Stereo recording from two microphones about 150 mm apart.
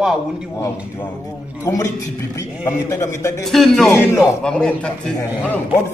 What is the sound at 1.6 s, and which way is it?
A man's voice, 20° left (ahead or behind).